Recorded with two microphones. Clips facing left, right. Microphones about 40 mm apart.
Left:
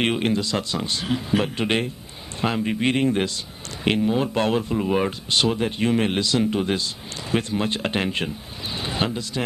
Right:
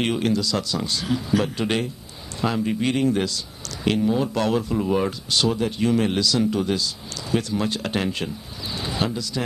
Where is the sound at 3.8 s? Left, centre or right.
Centre.